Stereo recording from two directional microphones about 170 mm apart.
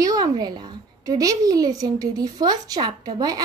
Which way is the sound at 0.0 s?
20° right (ahead or behind).